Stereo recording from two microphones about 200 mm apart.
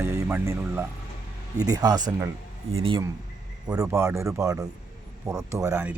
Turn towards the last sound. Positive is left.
turn(degrees=-10)  # may be behind; listen again after turning